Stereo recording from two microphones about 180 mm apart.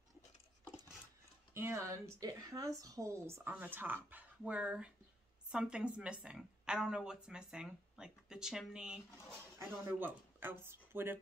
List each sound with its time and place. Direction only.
1.5 s a woman's voice: 15° right (ahead or behind)